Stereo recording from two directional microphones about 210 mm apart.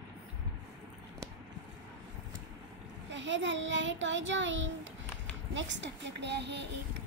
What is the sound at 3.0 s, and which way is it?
A child's voice, 60° right (ahead or behind).